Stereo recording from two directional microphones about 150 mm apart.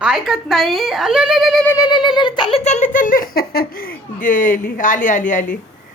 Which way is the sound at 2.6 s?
50° left (ahead or behind).